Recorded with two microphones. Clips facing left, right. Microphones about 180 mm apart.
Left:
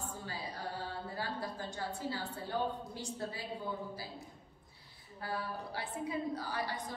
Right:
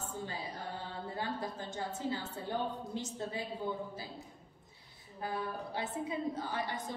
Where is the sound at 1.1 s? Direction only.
20° right (ahead or behind).